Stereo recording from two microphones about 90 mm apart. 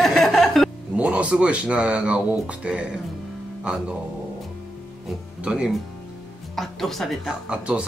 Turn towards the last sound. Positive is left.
turn(degrees=-10)  # may be behind; listen again after turning